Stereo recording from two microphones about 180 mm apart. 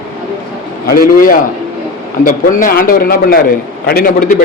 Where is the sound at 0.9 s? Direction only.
55° left (ahead or behind).